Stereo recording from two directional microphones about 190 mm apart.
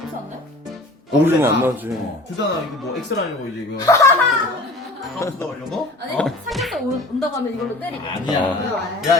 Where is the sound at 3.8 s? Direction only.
15° left (ahead or behind).